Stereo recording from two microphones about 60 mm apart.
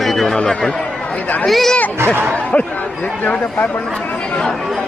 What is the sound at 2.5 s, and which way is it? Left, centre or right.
Speech, left.